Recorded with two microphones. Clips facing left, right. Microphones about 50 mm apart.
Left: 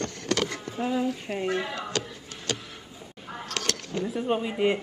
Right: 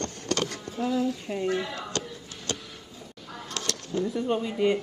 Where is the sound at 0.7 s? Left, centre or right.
Left.